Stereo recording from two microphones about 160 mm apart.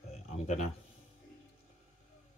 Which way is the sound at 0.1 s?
45° left (ahead or behind).